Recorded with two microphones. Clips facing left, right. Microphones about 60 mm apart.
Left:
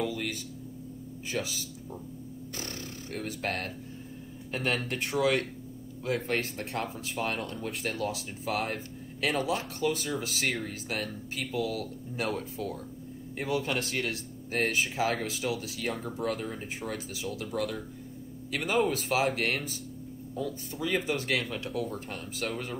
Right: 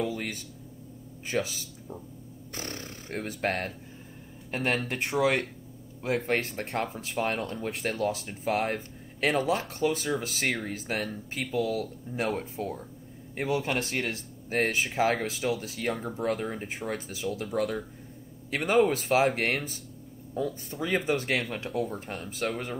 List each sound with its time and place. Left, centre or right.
0.0 s a sound: right
1.3 s speech: right
5.2 s speech: right
12.2 s speech: right
18.6 s speech: right
18.9 s speech: right